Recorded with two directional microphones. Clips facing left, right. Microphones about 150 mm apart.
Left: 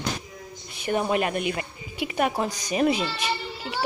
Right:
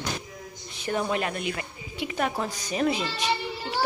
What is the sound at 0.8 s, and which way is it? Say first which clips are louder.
A woman's voice: left 3 dB; 15° left (ahead or behind).